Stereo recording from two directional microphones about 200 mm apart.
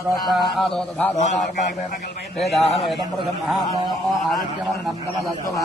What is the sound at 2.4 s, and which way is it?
Speech, centre (ahead or behind).